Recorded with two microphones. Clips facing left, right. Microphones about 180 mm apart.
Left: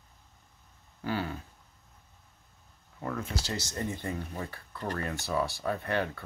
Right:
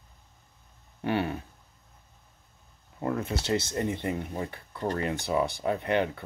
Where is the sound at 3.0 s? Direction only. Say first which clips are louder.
Right 5 dB; 25° right (ahead or behind).